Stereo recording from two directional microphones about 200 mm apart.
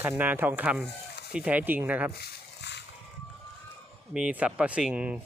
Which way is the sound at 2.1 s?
55° left (ahead or behind).